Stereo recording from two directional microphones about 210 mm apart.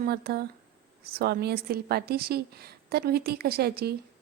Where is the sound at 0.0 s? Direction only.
45° right (ahead or behind).